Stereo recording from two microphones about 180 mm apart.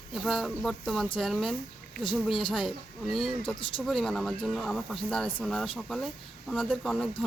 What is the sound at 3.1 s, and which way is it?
Speech, centre (ahead or behind).